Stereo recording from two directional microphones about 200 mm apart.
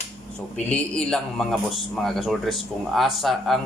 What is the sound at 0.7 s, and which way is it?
Speech, 5° left (ahead or behind).